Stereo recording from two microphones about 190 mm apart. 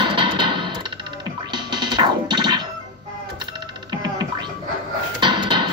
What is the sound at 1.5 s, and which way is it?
Music, 25° right (ahead or behind).